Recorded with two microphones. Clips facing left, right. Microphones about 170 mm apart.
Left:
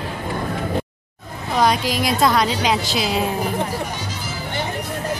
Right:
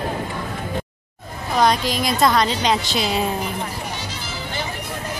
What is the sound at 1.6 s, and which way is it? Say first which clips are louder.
A woman's voice: even; 5° left (ahead or behind).